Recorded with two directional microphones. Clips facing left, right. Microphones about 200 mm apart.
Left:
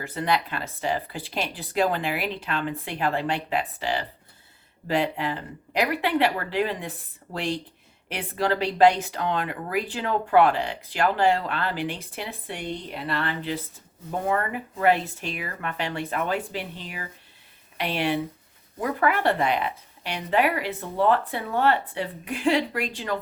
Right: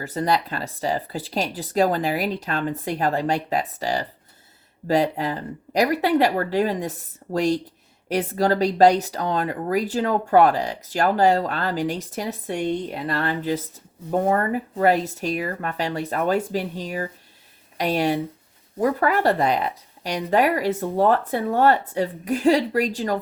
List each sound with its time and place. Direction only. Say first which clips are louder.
0.0 s speech: right 3 dB; 40° right (ahead or behind)